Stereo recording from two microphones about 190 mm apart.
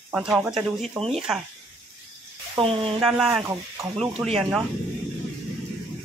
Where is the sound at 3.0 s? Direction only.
5° right (ahead or behind).